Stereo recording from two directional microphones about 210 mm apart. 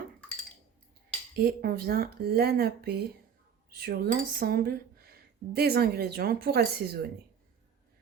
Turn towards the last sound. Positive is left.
turn(degrees=-50)  # may be behind; listen again after turning